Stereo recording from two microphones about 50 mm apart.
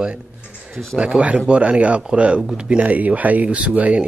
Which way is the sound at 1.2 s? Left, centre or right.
Right.